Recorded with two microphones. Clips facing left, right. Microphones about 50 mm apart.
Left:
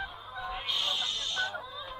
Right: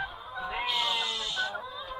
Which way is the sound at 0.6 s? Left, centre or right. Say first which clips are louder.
Right 4 dB; centre.